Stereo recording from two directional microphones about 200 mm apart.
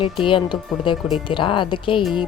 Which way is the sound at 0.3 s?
25° left (ahead or behind).